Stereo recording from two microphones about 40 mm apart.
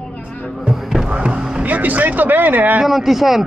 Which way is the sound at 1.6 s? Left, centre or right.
Right.